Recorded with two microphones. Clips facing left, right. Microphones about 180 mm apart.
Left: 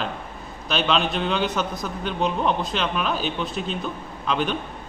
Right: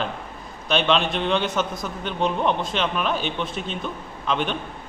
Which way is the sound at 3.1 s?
40° left (ahead or behind).